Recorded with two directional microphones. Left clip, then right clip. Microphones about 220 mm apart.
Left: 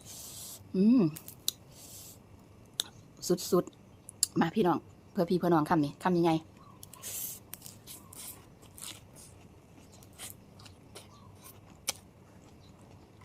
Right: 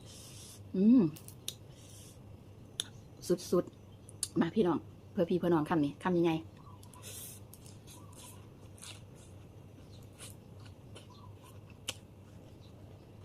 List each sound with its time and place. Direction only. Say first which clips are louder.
0.7 s speech: left 1 dB; 20° left (ahead or behind)
2.8 s clicking: left 4 dB; 20° left (ahead or behind)
3.2 s speech: left 3 dB; 20° left (ahead or behind)